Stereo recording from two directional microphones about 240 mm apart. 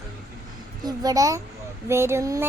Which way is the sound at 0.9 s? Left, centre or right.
Centre.